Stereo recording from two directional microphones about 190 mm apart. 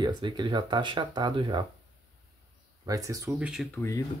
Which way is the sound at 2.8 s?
20° right (ahead or behind).